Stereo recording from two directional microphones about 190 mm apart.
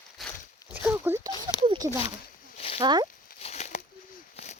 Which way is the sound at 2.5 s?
30° left (ahead or behind).